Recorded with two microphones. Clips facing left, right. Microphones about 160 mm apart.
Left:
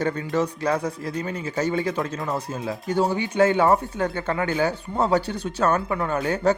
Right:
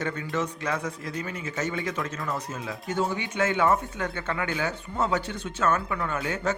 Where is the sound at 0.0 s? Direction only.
35° left (ahead or behind).